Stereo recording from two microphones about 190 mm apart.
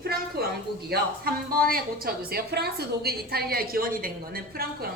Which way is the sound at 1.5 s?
50° right (ahead or behind).